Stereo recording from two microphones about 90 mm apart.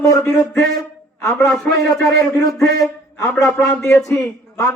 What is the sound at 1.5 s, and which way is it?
Speech, 5° left (ahead or behind).